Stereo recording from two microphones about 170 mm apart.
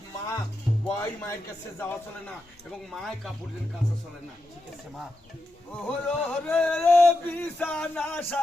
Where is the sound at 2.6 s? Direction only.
Centre (ahead or behind).